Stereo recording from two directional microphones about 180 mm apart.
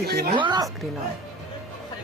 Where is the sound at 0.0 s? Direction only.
60° right (ahead or behind).